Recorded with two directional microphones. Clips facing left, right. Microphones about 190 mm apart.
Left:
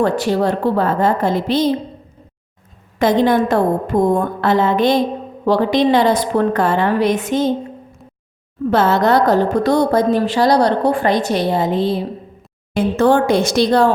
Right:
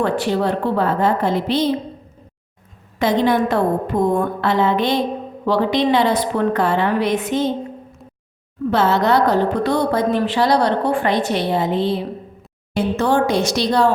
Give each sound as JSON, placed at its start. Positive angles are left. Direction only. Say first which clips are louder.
{"t": 0.0, "sound": "a woman's voice", "louder": "left 3 dB", "side_deg": 40}
{"t": 3.0, "sound": "a woman's voice", "louder": "left 3 dB", "side_deg": 50}
{"t": 8.7, "sound": "a woman's voice", "louder": "left 2 dB", "side_deg": 50}